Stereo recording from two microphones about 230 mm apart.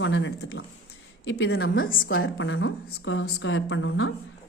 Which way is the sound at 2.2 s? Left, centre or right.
Left.